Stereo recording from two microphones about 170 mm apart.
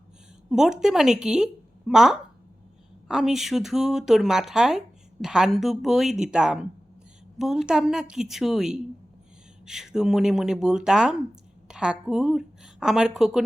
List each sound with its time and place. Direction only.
0.5 s a woman's voice: 5° right (ahead or behind)